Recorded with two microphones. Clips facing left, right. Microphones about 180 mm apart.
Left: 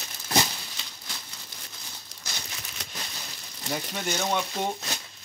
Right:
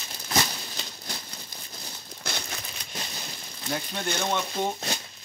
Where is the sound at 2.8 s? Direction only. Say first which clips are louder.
Left 3 dB; 90° left.